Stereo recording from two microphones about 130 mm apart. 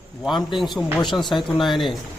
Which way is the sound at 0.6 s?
Centre (ahead or behind).